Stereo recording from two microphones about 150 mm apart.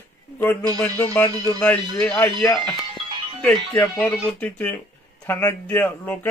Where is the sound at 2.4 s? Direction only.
Centre (ahead or behind).